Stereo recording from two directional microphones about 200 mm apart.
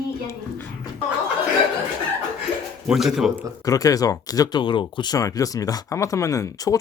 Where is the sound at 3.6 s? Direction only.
15° left (ahead or behind).